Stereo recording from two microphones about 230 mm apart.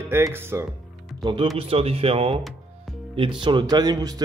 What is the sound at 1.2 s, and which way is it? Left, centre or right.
Speech, right.